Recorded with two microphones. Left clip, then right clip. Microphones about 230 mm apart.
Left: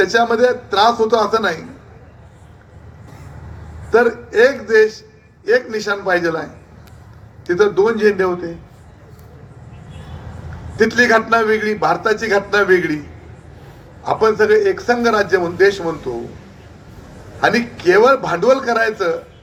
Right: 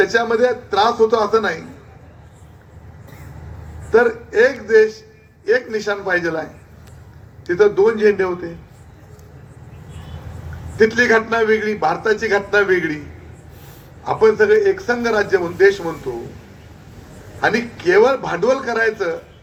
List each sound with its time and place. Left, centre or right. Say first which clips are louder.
0.0 s a man's voice: left 2 dB; left
3.9 s a man's voice: left 1 dB; left
10.8 s a man's voice: left 1 dB; left
14.0 s a man's voice: even; left
17.4 s a man's voice: left 3 dB; left